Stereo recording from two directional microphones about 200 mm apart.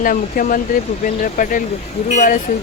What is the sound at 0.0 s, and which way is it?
Speech, 45° left (ahead or behind).